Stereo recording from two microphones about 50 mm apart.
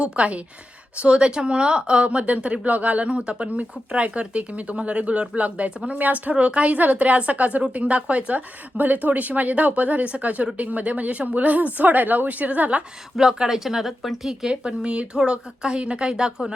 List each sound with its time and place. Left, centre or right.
0.0 s speech: right
13.1 s speech: centre
14.4 s speech: centre